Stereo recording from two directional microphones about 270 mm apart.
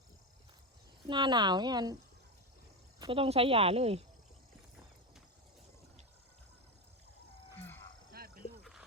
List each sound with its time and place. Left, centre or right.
1.0 s speech: centre
3.0 s speech: centre